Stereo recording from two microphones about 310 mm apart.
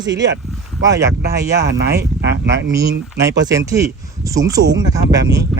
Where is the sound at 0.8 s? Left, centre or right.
Centre.